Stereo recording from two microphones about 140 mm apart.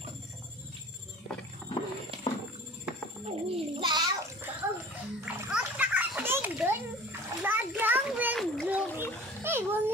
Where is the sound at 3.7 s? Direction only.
35° right (ahead or behind).